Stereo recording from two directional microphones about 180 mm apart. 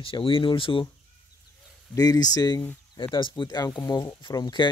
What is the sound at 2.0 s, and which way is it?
Speech, 20° left (ahead or behind).